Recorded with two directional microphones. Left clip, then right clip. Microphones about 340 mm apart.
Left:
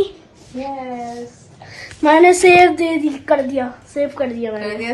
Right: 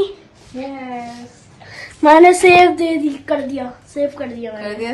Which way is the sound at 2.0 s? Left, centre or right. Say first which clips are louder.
Right 2 dB; centre.